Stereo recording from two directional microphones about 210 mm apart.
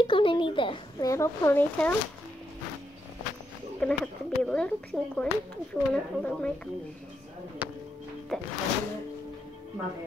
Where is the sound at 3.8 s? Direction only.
5° left (ahead or behind).